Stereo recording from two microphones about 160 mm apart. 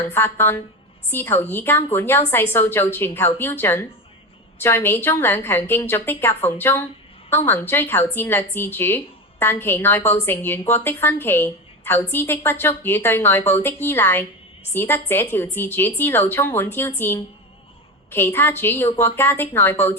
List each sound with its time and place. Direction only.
0.0 s a woman's voice: 15° left (ahead or behind)
18.1 s a woman's voice: 15° left (ahead or behind)